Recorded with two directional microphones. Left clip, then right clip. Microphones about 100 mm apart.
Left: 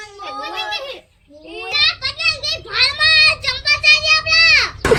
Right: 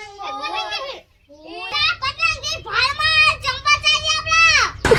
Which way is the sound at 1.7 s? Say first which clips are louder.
Left 3 dB; 15° right (ahead or behind).